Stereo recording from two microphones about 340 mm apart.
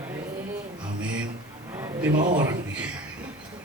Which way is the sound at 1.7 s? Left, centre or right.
Centre.